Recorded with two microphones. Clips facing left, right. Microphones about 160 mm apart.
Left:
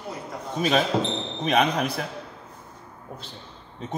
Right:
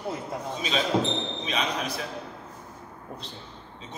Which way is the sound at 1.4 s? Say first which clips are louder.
Left 7 dB; 55° left (ahead or behind).